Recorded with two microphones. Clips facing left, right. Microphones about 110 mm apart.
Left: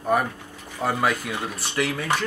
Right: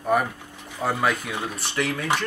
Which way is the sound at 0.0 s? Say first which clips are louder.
Even; centre (ahead or behind).